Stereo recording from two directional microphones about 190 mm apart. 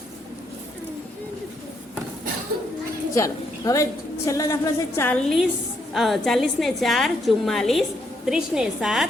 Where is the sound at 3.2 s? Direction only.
15° left (ahead or behind).